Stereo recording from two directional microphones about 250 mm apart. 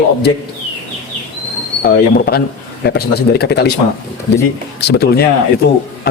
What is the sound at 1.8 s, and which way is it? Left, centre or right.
Speech, left.